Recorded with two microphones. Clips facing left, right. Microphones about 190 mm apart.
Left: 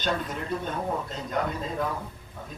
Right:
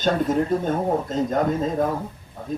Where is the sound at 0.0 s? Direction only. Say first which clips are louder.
Right 9 dB; 45° right (ahead or behind).